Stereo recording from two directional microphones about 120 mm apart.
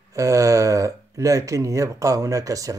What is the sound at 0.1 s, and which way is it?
Speech, 25° right (ahead or behind).